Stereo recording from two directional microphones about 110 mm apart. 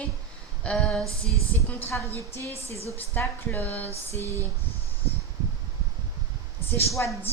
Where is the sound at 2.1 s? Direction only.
65° left (ahead or behind).